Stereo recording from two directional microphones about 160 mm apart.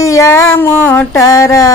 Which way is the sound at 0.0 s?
20° left (ahead or behind).